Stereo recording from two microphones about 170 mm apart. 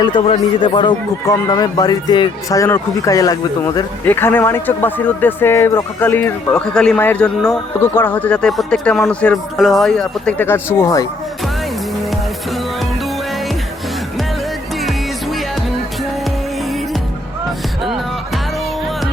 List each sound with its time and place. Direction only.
0.0 s a man's voice: 30° left (ahead or behind)
14.8 s music: centre (ahead or behind)